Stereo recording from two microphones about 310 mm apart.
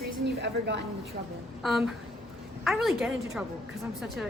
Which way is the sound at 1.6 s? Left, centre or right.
Centre.